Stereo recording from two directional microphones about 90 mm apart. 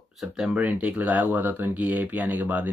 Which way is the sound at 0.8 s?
15° right (ahead or behind).